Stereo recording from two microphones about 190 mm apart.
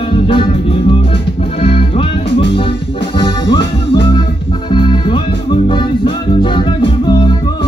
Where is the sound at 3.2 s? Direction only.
25° left (ahead or behind).